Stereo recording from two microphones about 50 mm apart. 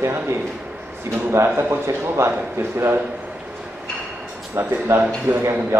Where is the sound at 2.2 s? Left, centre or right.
Right.